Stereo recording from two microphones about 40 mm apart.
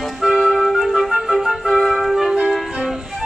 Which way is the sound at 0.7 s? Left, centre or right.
Centre.